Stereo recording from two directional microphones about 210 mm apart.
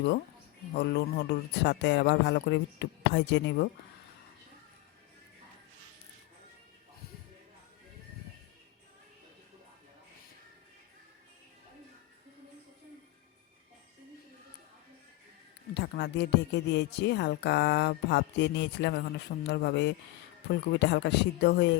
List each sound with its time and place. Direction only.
0.7 s speech: 50° left (ahead or behind)
15.7 s speech: 55° left (ahead or behind)